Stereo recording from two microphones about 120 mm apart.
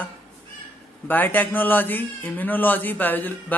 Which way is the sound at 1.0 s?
15° left (ahead or behind).